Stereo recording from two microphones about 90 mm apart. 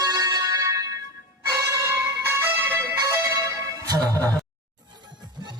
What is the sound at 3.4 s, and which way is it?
Music, 40° right (ahead or behind).